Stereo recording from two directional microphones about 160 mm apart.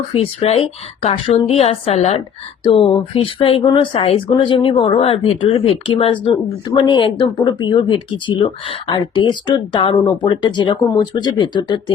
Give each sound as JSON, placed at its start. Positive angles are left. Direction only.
{"t": 0.1, "sound": "speech", "side_deg": 35}